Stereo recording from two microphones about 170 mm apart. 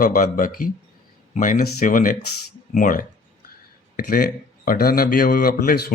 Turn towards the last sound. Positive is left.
turn(degrees=55)  # may be behind; listen again after turning